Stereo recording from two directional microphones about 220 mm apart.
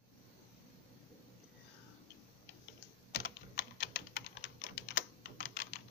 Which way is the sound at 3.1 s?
50° left (ahead or behind).